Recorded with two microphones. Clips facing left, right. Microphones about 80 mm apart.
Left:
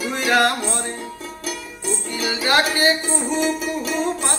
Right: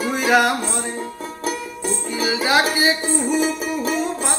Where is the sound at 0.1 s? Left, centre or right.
Centre.